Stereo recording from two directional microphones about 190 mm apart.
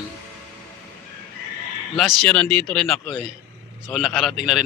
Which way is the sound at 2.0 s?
Centre (ahead or behind).